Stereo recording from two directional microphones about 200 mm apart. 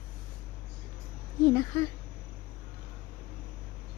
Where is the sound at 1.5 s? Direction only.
15° left (ahead or behind).